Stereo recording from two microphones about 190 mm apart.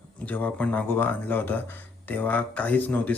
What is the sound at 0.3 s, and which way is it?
Speech, 10° left (ahead or behind).